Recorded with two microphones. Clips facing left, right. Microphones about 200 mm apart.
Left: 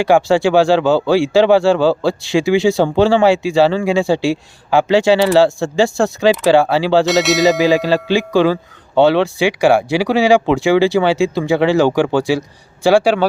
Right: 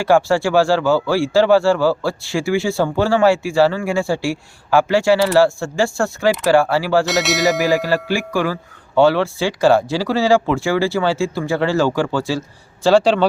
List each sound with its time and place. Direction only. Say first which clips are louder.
0.0 s speech: left 3 dB; 20° left (ahead or behind)
7.0 s bell: left 5 dB; centre (ahead or behind)
7.6 s speech: left 4 dB; 20° left (ahead or behind)